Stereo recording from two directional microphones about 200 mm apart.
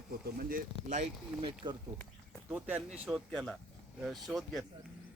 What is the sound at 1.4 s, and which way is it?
Speech, 25° right (ahead or behind).